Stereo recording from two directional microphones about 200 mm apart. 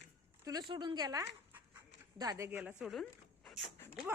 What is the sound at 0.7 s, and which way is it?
A woman's voice, 25° right (ahead or behind).